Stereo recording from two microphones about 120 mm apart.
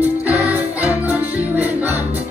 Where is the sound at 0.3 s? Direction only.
10° right (ahead or behind).